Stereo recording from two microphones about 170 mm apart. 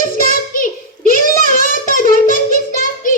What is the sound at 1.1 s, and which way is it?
Child singing, 55° left (ahead or behind).